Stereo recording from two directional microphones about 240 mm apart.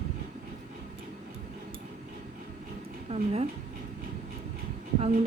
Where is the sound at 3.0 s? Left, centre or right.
Right.